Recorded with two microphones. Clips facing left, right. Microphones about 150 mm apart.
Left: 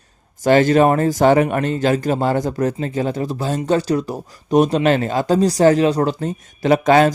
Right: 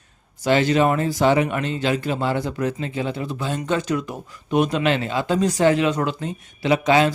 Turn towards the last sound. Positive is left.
turn(degrees=50)  # may be behind; listen again after turning